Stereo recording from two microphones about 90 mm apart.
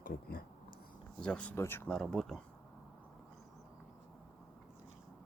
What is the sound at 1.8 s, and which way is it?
Speech, 10° left (ahead or behind).